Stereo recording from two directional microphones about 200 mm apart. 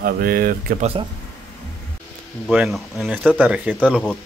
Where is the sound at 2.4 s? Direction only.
Centre (ahead or behind).